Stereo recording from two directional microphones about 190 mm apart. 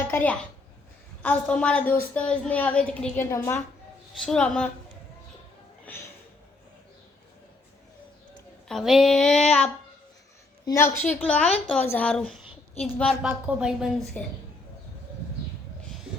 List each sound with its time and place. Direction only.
0.1 s a woman's voice: 10° left (ahead or behind)
4.3 s child singing: 5° left (ahead or behind)
5.9 s speech: 10° left (ahead or behind)
8.6 s child singing: centre (ahead or behind)
10.7 s a woman's voice: 15° left (ahead or behind)
12.8 s child singing: 5° left (ahead or behind)
14.2 s a woman's voice: 5° left (ahead or behind)